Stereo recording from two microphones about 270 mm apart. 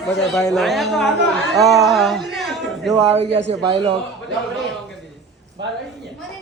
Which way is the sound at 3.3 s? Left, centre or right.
Right.